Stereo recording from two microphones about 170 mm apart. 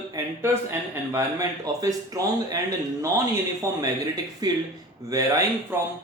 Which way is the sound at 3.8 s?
20° right (ahead or behind).